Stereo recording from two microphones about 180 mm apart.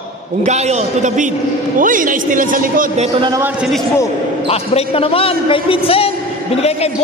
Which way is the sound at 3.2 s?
20° right (ahead or behind).